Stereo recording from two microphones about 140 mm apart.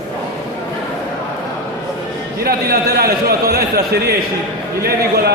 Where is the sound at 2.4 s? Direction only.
90° right.